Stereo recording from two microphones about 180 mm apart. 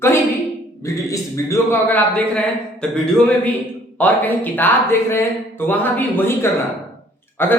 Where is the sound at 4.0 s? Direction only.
10° left (ahead or behind).